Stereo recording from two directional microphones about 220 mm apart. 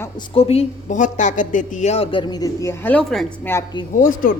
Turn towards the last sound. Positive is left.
turn(degrees=35)  # may be behind; listen again after turning